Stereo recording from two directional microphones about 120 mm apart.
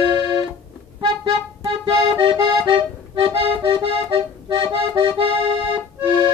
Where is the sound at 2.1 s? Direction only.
40° right (ahead or behind).